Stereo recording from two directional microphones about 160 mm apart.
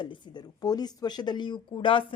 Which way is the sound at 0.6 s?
25° left (ahead or behind).